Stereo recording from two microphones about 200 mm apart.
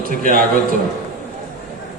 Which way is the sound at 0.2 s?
45° right (ahead or behind).